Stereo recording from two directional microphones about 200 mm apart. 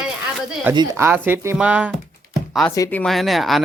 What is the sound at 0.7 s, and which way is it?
Speech, 20° right (ahead or behind).